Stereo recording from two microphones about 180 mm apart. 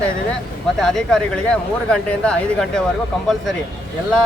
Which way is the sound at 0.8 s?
5° left (ahead or behind).